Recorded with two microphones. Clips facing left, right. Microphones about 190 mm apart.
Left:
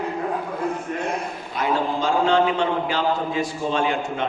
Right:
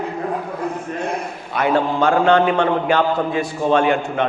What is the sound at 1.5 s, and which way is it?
A man's voice, 65° right (ahead or behind).